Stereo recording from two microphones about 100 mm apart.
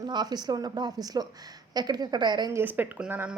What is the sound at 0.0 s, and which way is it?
Speech, 45° right (ahead or behind).